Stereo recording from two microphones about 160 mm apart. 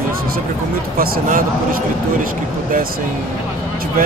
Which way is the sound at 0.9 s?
65° right (ahead or behind).